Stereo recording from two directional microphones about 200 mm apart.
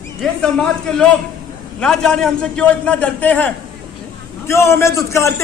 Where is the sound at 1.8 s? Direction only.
5° left (ahead or behind).